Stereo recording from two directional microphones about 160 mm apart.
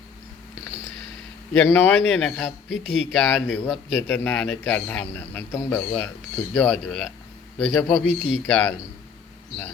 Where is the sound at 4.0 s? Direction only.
15° left (ahead or behind).